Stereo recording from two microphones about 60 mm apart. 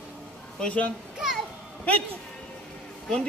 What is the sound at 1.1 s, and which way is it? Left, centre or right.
Speech, centre.